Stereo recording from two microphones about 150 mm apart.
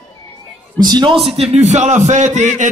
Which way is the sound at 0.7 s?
30° right (ahead or behind).